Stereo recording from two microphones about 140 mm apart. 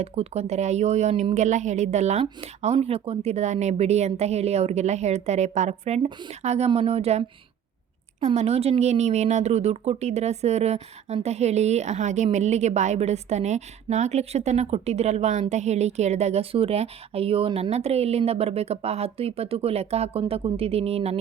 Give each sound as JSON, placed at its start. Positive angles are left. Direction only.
{"t": 0.0, "sound": "speech", "side_deg": -50}
{"t": 8.3, "sound": "speech", "side_deg": -50}